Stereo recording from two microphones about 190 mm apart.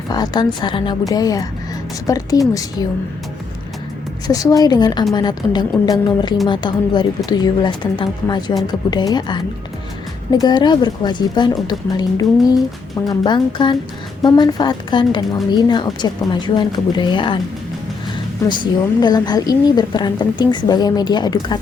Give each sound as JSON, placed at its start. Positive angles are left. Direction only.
{"t": 0.1, "sound": "a woman's voice", "side_deg": 20}
{"t": 4.3, "sound": "a woman's voice", "side_deg": 20}
{"t": 18.4, "sound": "a woman's voice", "side_deg": 25}